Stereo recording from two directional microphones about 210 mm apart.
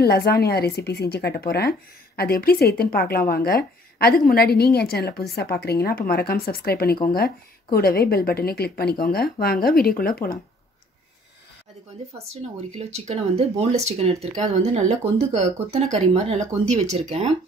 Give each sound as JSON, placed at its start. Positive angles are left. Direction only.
{"t": 0.0, "sound": "speech", "side_deg": 50}
{"t": 12.7, "sound": "speech", "side_deg": -30}